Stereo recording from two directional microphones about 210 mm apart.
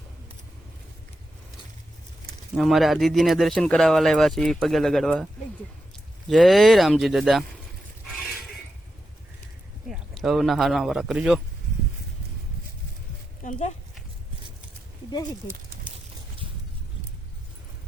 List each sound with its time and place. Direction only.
2.6 s speech: centre (ahead or behind)
9.9 s speech: centre (ahead or behind)
13.4 s a sound: 35° left (ahead or behind)